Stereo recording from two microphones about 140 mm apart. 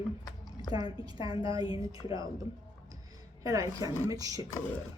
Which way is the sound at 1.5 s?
25° right (ahead or behind).